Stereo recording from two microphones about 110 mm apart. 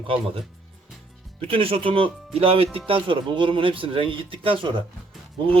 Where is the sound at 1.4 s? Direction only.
60° right (ahead or behind).